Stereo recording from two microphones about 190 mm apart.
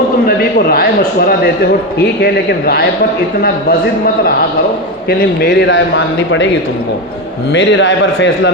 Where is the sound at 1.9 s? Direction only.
55° left (ahead or behind).